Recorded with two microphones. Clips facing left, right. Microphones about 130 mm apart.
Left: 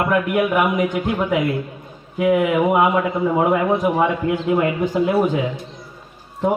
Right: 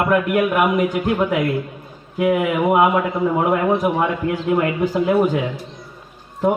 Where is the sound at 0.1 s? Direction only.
Centre (ahead or behind).